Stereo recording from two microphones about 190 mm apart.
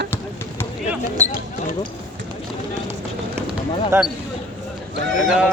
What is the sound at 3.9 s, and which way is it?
Speech, 15° right (ahead or behind).